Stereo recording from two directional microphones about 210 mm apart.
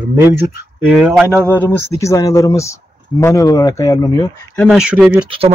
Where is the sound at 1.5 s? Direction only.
10° left (ahead or behind).